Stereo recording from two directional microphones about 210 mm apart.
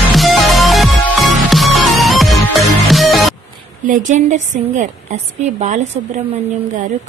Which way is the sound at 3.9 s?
35° right (ahead or behind).